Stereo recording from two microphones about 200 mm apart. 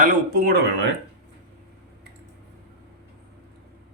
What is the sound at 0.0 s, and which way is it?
Speech, 45° right (ahead or behind).